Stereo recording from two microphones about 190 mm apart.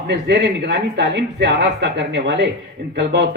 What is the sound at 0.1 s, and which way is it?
A man's voice, 60° right (ahead or behind).